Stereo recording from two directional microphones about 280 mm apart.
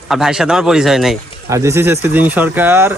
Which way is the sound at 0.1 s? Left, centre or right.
Centre.